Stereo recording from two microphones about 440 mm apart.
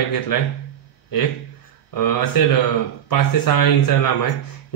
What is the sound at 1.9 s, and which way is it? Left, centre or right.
Speech, left.